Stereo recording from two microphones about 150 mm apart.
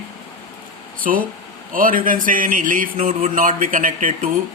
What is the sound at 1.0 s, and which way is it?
Speech, 65° right (ahead or behind).